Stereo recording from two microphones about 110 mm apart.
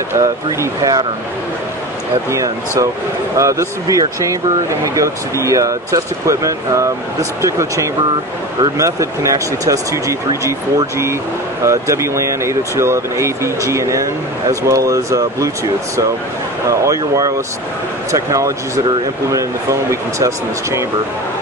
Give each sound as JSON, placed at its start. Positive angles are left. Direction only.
{"t": 0.1, "sound": "speech", "side_deg": -30}
{"t": 3.3, "sound": "speech", "side_deg": -30}
{"t": 16.6, "sound": "speech", "side_deg": -30}